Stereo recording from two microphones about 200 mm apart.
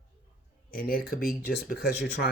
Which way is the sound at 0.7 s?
50° left (ahead or behind).